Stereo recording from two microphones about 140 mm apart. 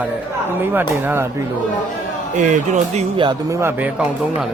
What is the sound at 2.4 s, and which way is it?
Speech, 65° right (ahead or behind).